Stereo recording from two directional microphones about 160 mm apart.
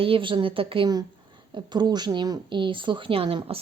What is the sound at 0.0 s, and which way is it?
A woman's voice, 35° right (ahead or behind).